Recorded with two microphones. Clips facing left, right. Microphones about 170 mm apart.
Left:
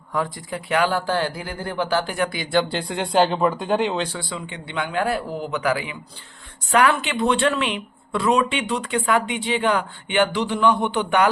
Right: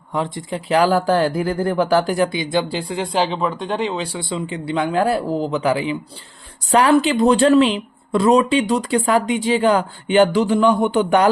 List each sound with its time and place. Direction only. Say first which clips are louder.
0.1 s speech: right 3 dB; 25° right (ahead or behind)
2.3 s speech: right 1 dB; 20° right (ahead or behind)
4.2 s speech: right 7 dB; 25° right (ahead or behind); by 11.3 s 40° right (ahead or behind)